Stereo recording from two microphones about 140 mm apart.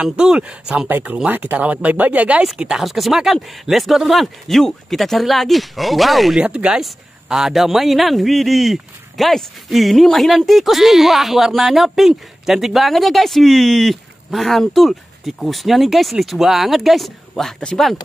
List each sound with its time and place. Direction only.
0.0 s speech: 5° right (ahead or behind)